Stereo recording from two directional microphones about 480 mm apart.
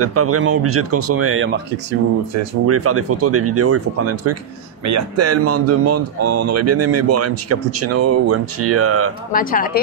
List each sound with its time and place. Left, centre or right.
0.0 s speech: right
9.3 s speech: centre